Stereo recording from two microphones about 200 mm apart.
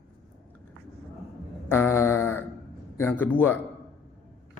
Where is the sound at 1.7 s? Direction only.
10° left (ahead or behind).